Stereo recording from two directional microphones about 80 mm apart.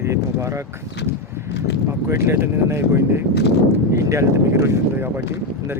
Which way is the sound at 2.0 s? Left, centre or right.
Right.